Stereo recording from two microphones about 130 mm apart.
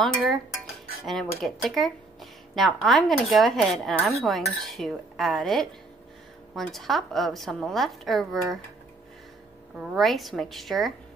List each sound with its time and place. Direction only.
0.0 s speech: centre (ahead or behind)
9.8 s speech: centre (ahead or behind)